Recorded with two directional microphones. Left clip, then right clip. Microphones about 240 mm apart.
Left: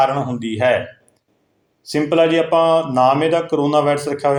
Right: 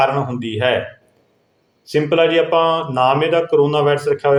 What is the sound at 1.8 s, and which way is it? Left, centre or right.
A man's voice, centre.